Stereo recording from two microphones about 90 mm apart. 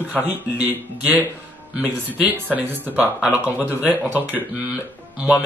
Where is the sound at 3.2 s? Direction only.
10° right (ahead or behind).